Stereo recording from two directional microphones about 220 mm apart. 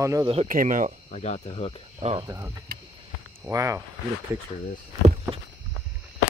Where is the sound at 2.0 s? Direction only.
30° right (ahead or behind).